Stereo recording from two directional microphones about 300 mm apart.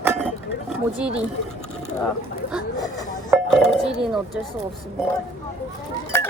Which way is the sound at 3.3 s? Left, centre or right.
Centre.